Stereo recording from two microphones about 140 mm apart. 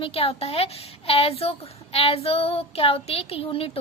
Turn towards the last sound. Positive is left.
turn(degrees=45)  # may be behind; listen again after turning